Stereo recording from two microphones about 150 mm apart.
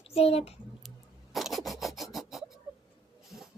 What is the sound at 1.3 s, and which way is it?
Filing, centre (ahead or behind).